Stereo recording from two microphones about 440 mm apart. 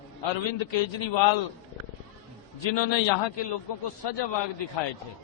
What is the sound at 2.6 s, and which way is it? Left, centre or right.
Speech, left.